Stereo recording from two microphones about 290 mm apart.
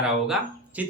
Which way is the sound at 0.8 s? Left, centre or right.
Centre.